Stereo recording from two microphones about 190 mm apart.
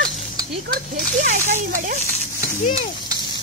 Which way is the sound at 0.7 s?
40° right (ahead or behind).